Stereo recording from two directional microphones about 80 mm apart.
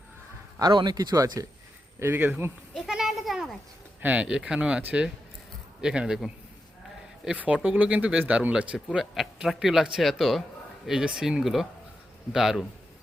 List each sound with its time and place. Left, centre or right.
0.6 s speech: right
2.0 s speech: right
2.8 s a sound: centre
4.0 s speech: centre
5.8 s a man's voice: centre